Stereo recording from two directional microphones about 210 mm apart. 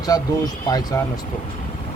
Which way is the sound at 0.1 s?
20° left (ahead or behind).